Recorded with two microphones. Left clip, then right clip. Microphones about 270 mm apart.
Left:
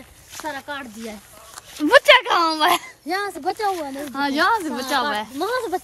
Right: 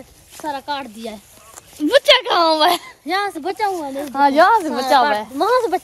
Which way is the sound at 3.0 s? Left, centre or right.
Right.